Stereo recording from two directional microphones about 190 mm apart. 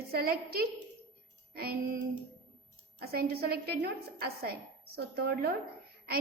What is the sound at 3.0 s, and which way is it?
A woman's voice, 55° right (ahead or behind).